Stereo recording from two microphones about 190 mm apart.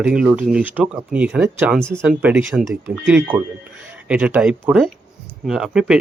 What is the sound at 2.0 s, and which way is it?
Speech, 10° right (ahead or behind).